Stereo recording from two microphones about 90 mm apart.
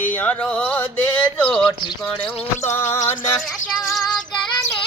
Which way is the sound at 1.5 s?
5° left (ahead or behind).